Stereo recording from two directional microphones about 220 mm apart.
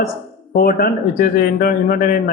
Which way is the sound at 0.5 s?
45° left (ahead or behind).